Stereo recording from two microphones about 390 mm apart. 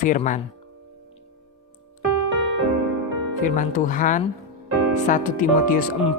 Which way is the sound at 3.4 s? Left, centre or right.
Centre.